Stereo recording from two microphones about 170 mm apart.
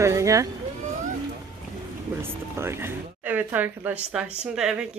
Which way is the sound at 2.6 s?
15° right (ahead or behind).